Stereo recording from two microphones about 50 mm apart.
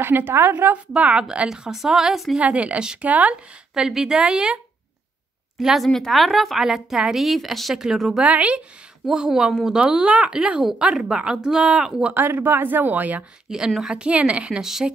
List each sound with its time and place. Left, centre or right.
0.0 s speech: right
0.9 s speech: right
1.5 s a woman's voice: centre
2.3 s speech: right
3.7 s a woman's voice: centre
5.6 s a woman's voice: centre
5.9 s a woman's voice: centre
8.2 s speech: right
9.1 s a woman's voice: centre
9.8 s speech: centre
12.1 s speech: right
13.5 s a woman's voice: centre
13.8 s speech: right
14.6 s a woman's voice: centre